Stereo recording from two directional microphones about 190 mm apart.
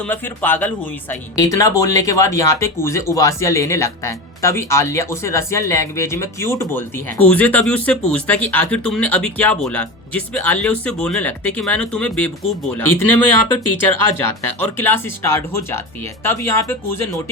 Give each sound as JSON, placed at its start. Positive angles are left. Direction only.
{"t": 0.0, "sound": "speech", "side_deg": 10}